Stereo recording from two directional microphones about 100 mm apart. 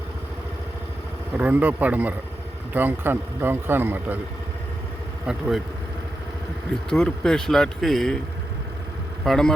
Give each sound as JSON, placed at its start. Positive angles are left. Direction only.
{"t": 1.3, "sound": "a man's voice", "side_deg": -15}
{"t": 5.2, "sound": "speech", "side_deg": -10}
{"t": 6.9, "sound": "speech", "side_deg": 5}
{"t": 9.2, "sound": "speech", "side_deg": 5}